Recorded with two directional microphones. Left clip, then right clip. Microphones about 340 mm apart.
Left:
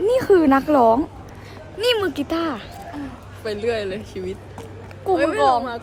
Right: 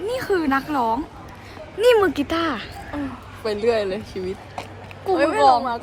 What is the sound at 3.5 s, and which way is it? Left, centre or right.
A woman's voice, centre.